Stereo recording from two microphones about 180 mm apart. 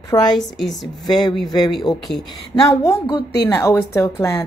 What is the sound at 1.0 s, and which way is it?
Speech, 25° left (ahead or behind).